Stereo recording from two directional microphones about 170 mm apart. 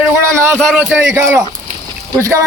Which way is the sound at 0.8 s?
5° right (ahead or behind).